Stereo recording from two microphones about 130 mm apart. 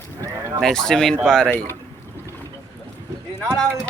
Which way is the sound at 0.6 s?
5° left (ahead or behind).